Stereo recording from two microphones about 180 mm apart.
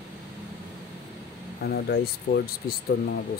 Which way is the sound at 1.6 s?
60° left (ahead or behind).